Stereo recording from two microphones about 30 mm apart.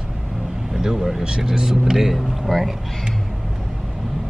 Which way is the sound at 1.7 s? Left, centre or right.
Centre.